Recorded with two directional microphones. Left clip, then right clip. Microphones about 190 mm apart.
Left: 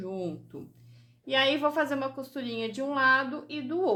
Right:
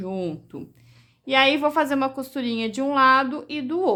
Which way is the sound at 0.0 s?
40° right (ahead or behind).